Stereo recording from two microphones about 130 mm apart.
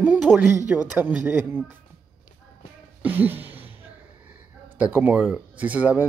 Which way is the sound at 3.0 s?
15° right (ahead or behind).